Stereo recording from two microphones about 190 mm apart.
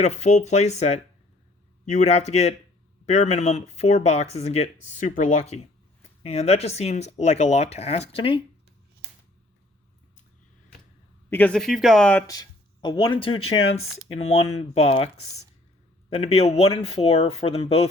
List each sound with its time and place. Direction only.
0.0 s speech: 35° left (ahead or behind)
11.3 s speech: 10° left (ahead or behind)
12.3 s speech: 20° left (ahead or behind)